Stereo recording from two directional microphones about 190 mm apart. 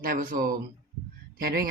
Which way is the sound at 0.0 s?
50° right (ahead or behind).